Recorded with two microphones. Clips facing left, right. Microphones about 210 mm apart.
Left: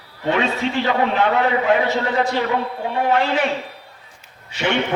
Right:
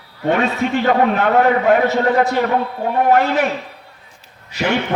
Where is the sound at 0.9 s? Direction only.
55° right (ahead or behind).